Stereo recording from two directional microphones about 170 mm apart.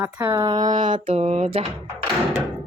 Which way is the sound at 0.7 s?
50° right (ahead or behind).